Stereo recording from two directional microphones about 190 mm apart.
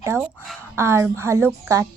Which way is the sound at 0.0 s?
15° right (ahead or behind).